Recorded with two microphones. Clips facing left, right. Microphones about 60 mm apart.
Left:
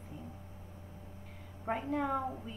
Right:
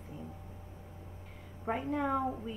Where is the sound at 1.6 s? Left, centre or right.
Centre.